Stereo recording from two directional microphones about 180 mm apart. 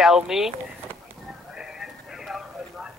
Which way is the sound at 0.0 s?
Centre (ahead or behind).